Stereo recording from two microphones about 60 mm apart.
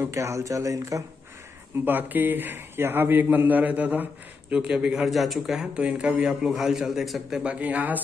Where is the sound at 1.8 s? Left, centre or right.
Right.